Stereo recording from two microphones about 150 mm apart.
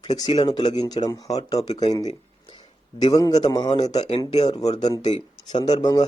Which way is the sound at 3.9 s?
45° left (ahead or behind).